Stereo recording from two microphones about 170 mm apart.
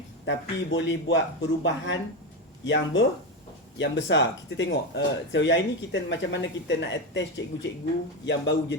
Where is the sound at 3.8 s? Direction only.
90° left.